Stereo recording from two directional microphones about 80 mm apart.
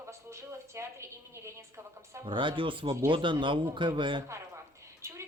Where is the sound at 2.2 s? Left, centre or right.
Right.